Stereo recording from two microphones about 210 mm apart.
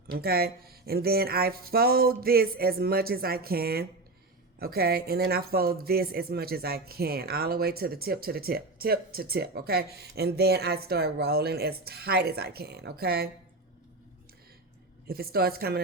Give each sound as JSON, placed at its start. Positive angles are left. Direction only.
{"t": 0.1, "sound": "speech", "side_deg": -45}
{"t": 15.0, "sound": "speech", "side_deg": -45}